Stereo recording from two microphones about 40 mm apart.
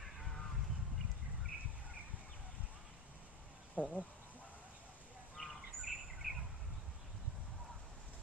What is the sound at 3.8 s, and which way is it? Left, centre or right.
Speech, left.